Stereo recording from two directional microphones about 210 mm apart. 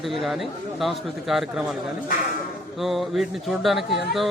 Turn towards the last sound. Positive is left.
turn(degrees=0)  # may be behind; listen again after turning